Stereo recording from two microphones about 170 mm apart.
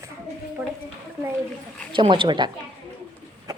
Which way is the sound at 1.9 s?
30° right (ahead or behind).